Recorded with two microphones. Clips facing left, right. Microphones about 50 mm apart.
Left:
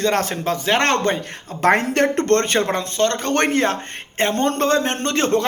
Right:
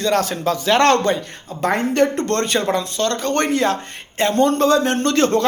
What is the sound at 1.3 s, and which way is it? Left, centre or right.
Speech, left.